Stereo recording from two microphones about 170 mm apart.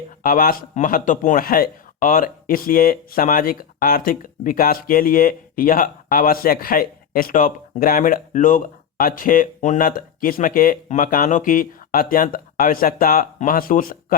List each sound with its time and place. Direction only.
0.2 s speech: 55° left (ahead or behind)